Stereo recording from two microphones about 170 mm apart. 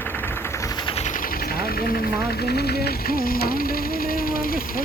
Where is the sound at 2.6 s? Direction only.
65° left (ahead or behind).